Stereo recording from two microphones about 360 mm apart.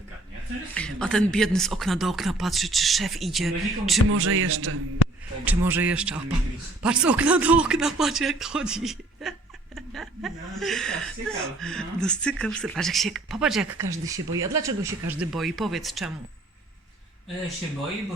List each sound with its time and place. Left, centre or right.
0.7 s speech: centre
4.1 s speech: right
5.5 s speech: centre